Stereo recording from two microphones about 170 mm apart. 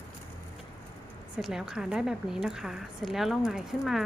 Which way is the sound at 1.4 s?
Centre (ahead or behind).